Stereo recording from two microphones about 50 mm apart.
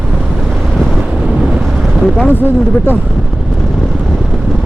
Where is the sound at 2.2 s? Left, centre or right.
Left.